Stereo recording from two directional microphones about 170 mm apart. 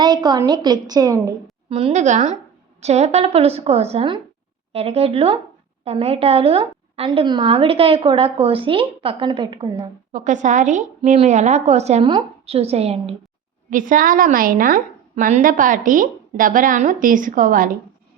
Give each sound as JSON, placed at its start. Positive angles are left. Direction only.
{"t": 0.0, "sound": "a woman's voice", "side_deg": -25}
{"t": 1.7, "sound": "a woman's voice", "side_deg": -40}
{"t": 10.1, "sound": "a woman's voice", "side_deg": -45}
{"t": 13.7, "sound": "a woman's voice", "side_deg": -50}